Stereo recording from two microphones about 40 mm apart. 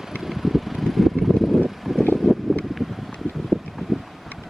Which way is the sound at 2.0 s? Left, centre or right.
Left.